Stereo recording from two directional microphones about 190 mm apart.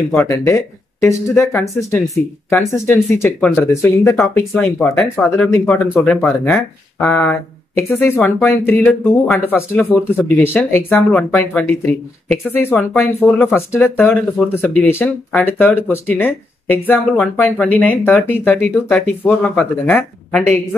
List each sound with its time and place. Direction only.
0.3 s speech: 15° left (ahead or behind)